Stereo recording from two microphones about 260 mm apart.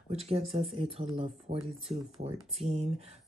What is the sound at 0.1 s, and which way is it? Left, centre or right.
Speech, right.